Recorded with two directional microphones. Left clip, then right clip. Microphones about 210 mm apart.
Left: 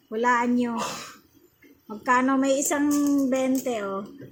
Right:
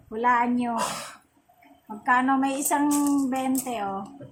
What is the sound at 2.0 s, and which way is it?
A woman's voice, 10° left (ahead or behind).